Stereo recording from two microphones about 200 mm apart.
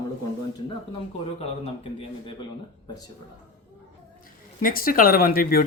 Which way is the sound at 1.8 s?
25° left (ahead or behind).